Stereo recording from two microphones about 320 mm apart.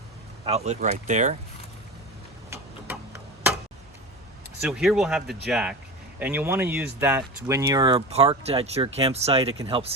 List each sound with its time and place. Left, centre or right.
0.4 s speech: centre
2.5 s tick-tock: centre
4.6 s speech: centre